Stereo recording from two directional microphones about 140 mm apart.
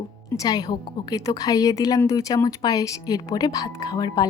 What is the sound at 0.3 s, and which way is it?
Speech, 30° left (ahead or behind).